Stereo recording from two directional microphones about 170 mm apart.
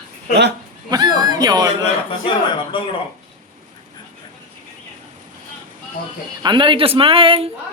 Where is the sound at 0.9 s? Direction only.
25° right (ahead or behind).